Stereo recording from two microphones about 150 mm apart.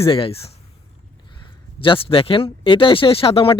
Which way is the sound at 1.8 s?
35° left (ahead or behind).